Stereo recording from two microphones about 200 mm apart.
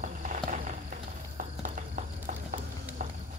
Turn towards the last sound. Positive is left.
turn(degrees=-45)  # may be behind; listen again after turning